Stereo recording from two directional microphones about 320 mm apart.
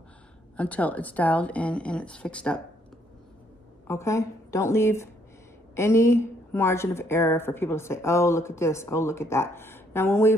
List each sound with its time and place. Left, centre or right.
0.6 s a woman's voice: centre
3.8 s a woman's voice: centre